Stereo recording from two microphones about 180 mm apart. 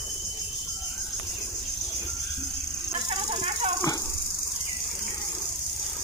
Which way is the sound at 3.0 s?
35° right (ahead or behind).